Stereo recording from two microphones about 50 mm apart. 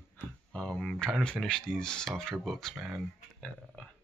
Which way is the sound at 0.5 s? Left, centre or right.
Centre.